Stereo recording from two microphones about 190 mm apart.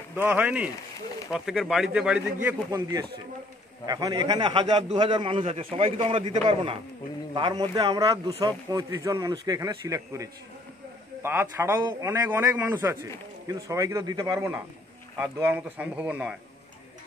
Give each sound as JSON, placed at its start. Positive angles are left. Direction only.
{"t": 0.1, "sound": "speech", "side_deg": -10}
{"t": 2.4, "sound": "a man's voice", "side_deg": -15}